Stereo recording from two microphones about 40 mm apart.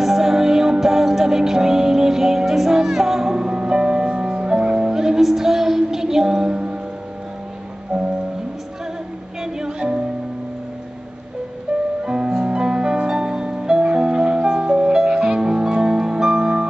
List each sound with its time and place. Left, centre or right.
0.0 s music: centre
3.3 s music: centre
9.4 s music: centre
11.7 s music: right